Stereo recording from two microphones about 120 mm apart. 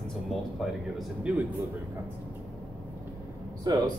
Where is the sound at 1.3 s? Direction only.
10° right (ahead or behind).